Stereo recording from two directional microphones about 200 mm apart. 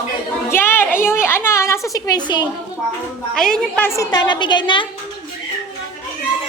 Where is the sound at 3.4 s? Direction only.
5° left (ahead or behind); by 4.8 s 25° left (ahead or behind).